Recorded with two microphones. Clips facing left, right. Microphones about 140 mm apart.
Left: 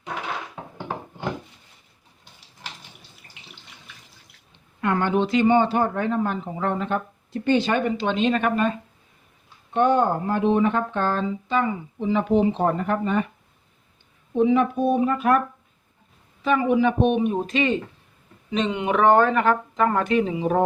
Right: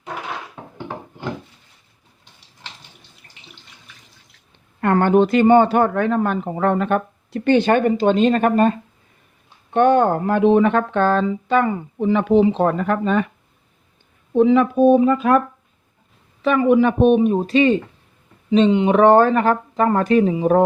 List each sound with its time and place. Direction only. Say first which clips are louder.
4.8 s speech: right 7 dB; 50° right (ahead or behind)
9.7 s speech: right 5 dB; 70° right (ahead or behind)
12.1 s speech: right 5 dB; 90° right
14.3 s speech: right 5 dB; 90° right
16.4 s speech: right 5 dB; 65° right (ahead or behind)
17.0 s speech: right 6 dB; 40° right (ahead or behind)